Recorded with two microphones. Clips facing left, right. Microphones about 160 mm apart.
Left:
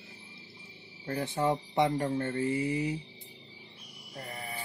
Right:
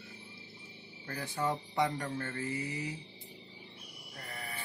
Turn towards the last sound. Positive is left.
turn(degrees=30)  # may be behind; listen again after turning